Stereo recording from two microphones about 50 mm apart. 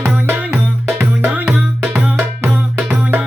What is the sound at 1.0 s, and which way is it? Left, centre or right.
Music, right.